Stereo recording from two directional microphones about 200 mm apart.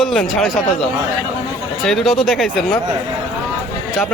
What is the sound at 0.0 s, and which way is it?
Speech, centre (ahead or behind).